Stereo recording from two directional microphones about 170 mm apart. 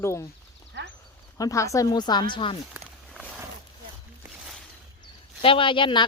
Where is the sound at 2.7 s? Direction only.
5° right (ahead or behind).